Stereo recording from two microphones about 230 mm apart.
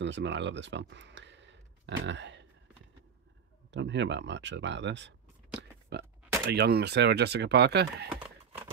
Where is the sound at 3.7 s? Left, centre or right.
Right.